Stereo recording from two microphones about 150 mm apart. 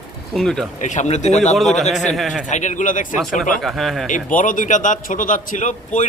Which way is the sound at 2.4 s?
55° left (ahead or behind).